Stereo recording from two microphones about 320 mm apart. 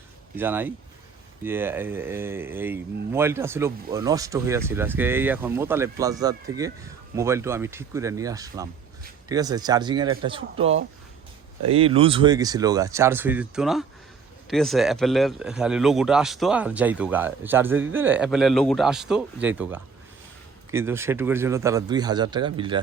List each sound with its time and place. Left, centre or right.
0.3 s speech: centre
11.7 s a man's voice: centre